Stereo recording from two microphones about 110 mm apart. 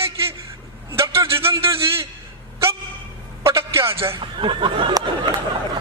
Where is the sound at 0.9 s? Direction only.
25° right (ahead or behind).